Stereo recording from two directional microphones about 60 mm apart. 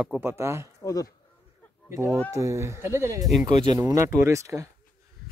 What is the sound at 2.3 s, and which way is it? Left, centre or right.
Speech, right.